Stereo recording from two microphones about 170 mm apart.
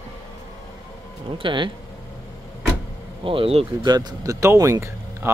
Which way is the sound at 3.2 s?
30° right (ahead or behind).